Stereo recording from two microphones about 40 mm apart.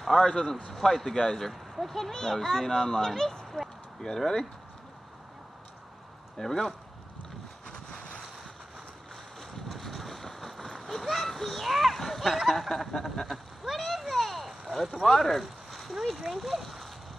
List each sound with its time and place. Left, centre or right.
0.0 s a child's voice: centre
6.3 s a child's voice: centre
7.6 s vehicle: centre
9.1 s boat: centre
12.5 s a sound: centre
15.0 s speech: centre